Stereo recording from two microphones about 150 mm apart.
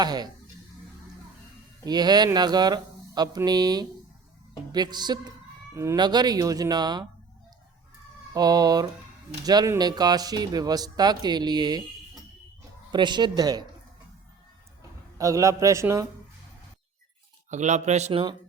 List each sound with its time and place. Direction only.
0.0 s speech: 25° right (ahead or behind)
1.8 s speech: 25° right (ahead or behind)
8.3 s speech: 25° right (ahead or behind)
12.9 s speech: 30° right (ahead or behind)
14.8 s a man's voice: 20° right (ahead or behind)
17.5 s speech: 50° right (ahead or behind)